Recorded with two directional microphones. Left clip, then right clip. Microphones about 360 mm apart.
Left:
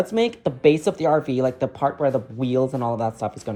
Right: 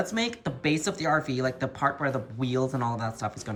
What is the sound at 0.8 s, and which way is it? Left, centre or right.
Speech, centre.